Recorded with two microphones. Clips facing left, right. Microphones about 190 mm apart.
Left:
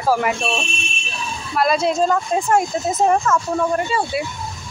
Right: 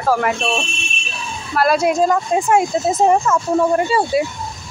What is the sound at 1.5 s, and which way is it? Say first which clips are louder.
Speech: right 2 dB; 5° right (ahead or behind).